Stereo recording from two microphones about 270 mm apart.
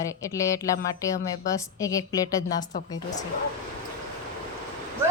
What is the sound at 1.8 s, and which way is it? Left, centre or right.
A woman's voice, centre.